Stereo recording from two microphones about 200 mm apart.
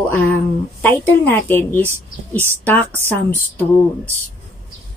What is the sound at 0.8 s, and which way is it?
Speech, 10° left (ahead or behind).